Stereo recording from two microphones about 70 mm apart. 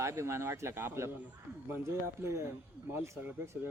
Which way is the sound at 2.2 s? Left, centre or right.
Right.